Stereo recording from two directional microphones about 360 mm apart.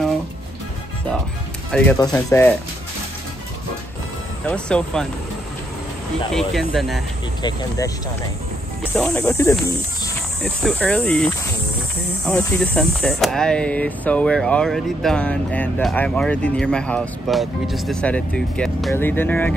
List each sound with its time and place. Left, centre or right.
1.7 s speech: centre
4.5 s speech: centre
6.3 s speech: centre
8.9 s speech: centre
12.3 s speech: centre